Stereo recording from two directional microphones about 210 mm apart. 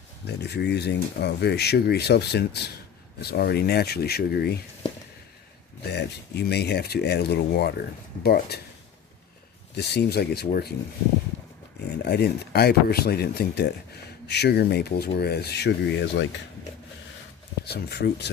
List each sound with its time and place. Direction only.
0.3 s speech: 50° left (ahead or behind)
5.8 s speech: 50° left (ahead or behind)
9.7 s speech: 50° left (ahead or behind)
12.0 s speech: 50° left (ahead or behind)
17.7 s speech: 50° left (ahead or behind)